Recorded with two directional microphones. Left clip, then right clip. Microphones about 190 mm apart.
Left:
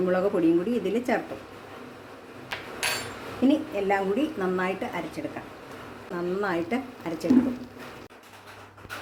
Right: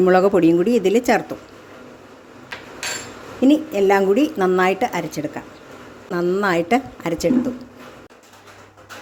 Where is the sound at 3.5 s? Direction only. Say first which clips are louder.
Right 9 dB; 60° right (ahead or behind).